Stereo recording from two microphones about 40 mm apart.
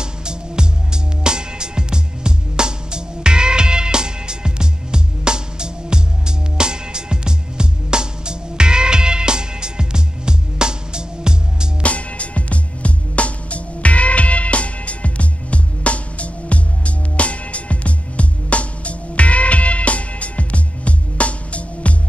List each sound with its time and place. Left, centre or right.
0.0 s music: right
11.8 s music: left